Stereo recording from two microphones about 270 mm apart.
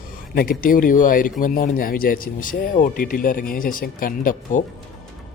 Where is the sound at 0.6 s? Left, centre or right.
Left.